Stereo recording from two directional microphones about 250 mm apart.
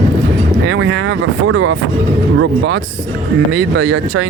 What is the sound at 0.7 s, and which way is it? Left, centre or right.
Speech, right.